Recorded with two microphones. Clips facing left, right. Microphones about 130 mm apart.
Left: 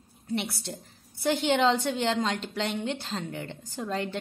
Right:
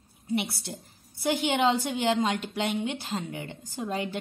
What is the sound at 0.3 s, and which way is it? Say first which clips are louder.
A woman's voice: right 2 dB; 10° right (ahead or behind).